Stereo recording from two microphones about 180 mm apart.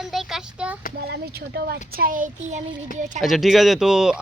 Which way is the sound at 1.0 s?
60° right (ahead or behind).